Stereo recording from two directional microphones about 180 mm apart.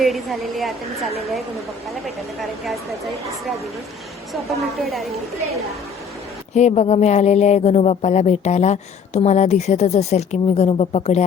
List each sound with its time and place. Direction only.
0.0 s a woman's voice: centre (ahead or behind)
4.3 s a woman's voice: centre (ahead or behind)
6.5 s speech: 40° left (ahead or behind)